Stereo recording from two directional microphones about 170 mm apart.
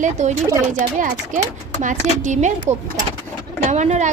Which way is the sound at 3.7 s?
40° right (ahead or behind).